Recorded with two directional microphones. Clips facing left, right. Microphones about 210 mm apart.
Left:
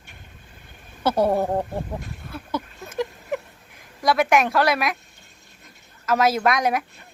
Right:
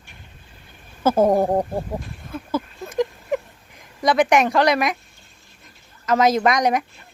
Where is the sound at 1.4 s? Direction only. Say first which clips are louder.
Right 4 dB; 15° right (ahead or behind).